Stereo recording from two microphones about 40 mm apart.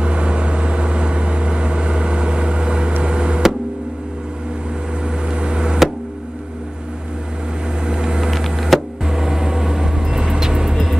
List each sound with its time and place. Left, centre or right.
0.0 s vehicle: right
3.0 s a sound: right
5.0 s vehicle: right
7.8 s vehicle: right
8.3 s a sound: centre
9.0 s vehicle: centre